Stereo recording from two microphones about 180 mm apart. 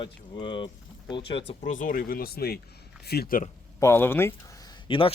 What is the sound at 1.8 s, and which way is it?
Speech, 55° left (ahead or behind).